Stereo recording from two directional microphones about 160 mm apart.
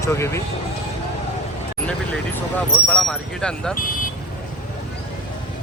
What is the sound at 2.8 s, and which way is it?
Speech, 5° left (ahead or behind).